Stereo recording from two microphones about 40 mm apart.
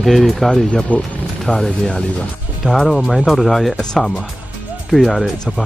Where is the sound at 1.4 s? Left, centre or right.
Centre.